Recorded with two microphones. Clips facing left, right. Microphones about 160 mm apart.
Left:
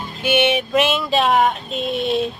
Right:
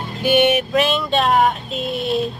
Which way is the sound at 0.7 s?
Centre (ahead or behind).